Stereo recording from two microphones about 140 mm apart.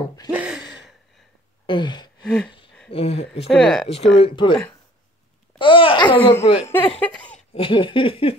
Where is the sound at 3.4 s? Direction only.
5° left (ahead or behind).